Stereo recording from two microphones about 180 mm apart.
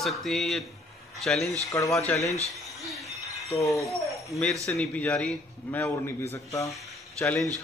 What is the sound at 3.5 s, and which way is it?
Speech, 20° left (ahead or behind).